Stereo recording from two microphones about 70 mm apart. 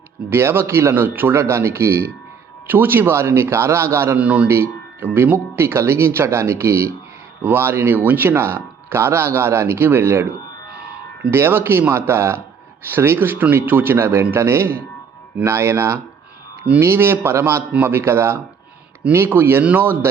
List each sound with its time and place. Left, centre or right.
0.3 s speech: right
0.9 s speech: right
2.6 s speech: right
4.2 s speech: centre
4.4 s speech: right
10.7 s music: centre
11.3 s speech: right